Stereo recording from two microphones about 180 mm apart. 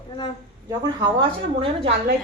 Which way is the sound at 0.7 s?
25° right (ahead or behind).